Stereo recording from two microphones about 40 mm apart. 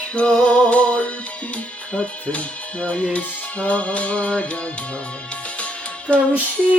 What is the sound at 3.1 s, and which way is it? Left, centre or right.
Music, left.